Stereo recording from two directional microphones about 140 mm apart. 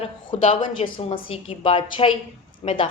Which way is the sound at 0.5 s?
35° left (ahead or behind).